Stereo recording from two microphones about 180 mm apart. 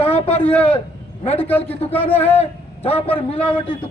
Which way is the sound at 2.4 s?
35° left (ahead or behind).